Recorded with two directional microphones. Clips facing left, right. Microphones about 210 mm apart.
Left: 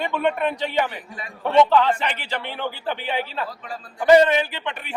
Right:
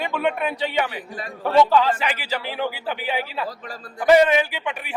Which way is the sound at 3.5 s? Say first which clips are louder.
Right 1 dB; 40° right (ahead or behind).